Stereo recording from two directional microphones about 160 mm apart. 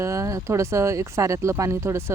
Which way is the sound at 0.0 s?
20° right (ahead or behind).